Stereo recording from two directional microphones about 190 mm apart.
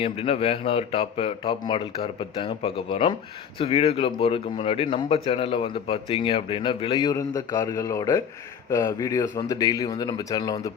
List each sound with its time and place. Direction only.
0.0 s speech: 30° left (ahead or behind)